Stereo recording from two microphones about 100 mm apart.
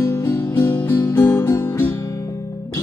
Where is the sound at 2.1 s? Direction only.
35° left (ahead or behind).